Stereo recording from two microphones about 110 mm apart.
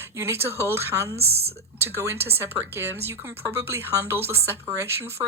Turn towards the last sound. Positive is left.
turn(degrees=-25)  # may be behind; listen again after turning